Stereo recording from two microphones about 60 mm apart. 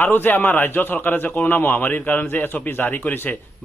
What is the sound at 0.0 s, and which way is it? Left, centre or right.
A man's voice, left.